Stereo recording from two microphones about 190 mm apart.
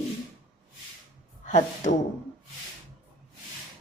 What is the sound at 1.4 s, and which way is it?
Speech, 40° left (ahead or behind).